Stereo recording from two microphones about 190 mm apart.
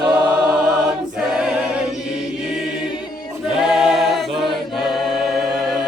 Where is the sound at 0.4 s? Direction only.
5° right (ahead or behind).